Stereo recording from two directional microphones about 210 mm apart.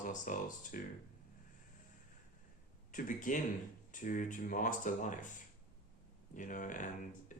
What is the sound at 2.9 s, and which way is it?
Speech, 40° left (ahead or behind).